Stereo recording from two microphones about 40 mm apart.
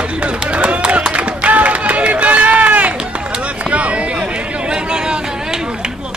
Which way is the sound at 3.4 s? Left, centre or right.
Right.